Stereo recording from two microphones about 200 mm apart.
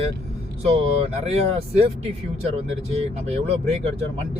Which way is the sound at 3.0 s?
30° right (ahead or behind).